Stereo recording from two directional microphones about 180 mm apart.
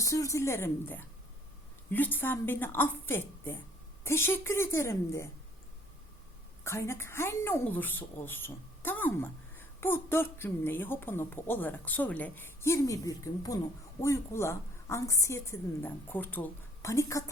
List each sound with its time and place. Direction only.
0.0 s a woman's voice: 20° left (ahead or behind)
6.7 s a woman's voice: 15° left (ahead or behind)